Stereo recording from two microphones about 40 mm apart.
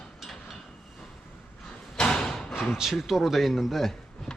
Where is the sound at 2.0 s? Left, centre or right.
Centre.